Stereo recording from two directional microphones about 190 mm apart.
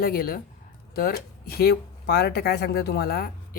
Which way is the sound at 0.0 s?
50° left (ahead or behind).